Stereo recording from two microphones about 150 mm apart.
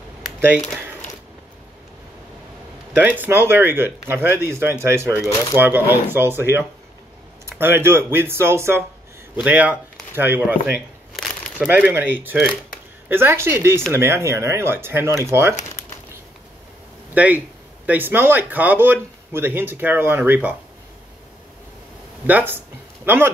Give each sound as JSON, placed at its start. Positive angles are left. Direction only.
{"t": 2.9, "sound": "speech", "side_deg": -10}
{"t": 17.1, "sound": "speech", "side_deg": -10}
{"t": 22.2, "sound": "speech", "side_deg": -15}